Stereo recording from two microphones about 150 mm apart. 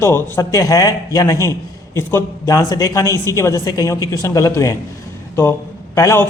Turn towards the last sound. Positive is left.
turn(degrees=20)  # may be behind; listen again after turning